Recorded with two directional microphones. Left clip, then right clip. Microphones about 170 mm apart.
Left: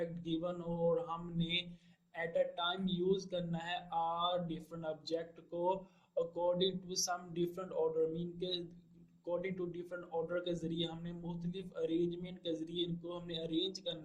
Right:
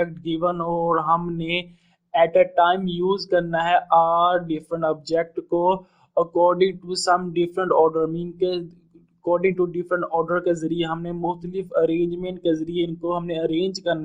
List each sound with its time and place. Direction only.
0.0 s speech: 35° right (ahead or behind)